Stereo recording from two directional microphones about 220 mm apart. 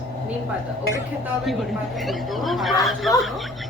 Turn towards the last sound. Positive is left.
turn(degrees=0)  # may be behind; listen again after turning